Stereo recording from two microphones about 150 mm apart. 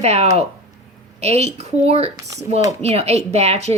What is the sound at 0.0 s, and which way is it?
Speech, 45° right (ahead or behind).